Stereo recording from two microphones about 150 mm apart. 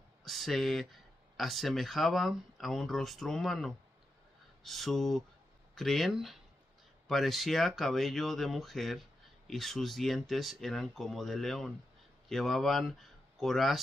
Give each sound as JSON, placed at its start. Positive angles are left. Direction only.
{"t": 0.2, "sound": "speech", "side_deg": 0}